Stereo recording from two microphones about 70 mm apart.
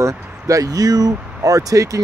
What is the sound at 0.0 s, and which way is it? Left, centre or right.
Speech, right.